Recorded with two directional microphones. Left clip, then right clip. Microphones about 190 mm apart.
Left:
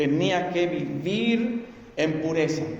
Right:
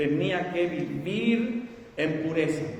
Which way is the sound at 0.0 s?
45° left (ahead or behind).